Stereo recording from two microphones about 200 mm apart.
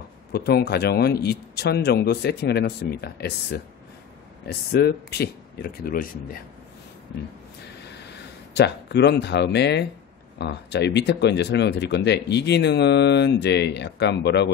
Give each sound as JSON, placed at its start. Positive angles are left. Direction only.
{"t": 0.3, "sound": "a man's voice", "side_deg": 55}
{"t": 8.5, "sound": "speech", "side_deg": 60}